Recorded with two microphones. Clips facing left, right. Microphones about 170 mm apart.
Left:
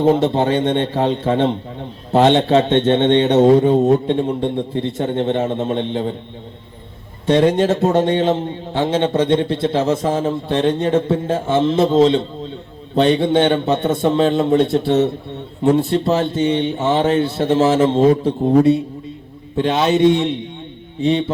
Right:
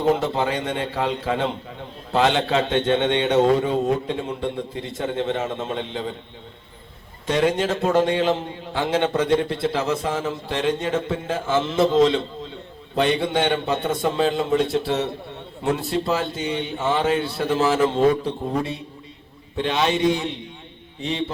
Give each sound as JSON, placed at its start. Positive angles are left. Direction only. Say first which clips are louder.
{"t": 0.0, "sound": "a man's voice", "louder": "left 6 dB", "side_deg": 25}
{"t": 3.5, "sound": "a man's voice", "louder": "left 8 dB", "side_deg": 35}
{"t": 7.3, "sound": "a man's voice", "louder": "left 7 dB", "side_deg": 30}
{"t": 7.9, "sound": "a man's voice", "louder": "left 4 dB", "side_deg": 30}
{"t": 20.1, "sound": "a man's voice", "louder": "left 7 dB", "side_deg": 30}